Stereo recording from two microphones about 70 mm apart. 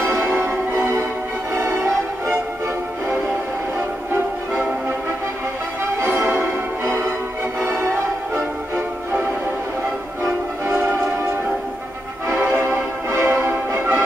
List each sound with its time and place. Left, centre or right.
0.0 s music: right
6.0 s music: right
8.7 s music: right
12.4 s music: right